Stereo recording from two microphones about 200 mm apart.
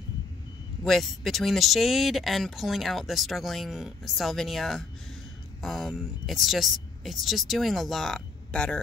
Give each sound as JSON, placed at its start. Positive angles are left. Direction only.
{"t": 0.8, "sound": "speech", "side_deg": 0}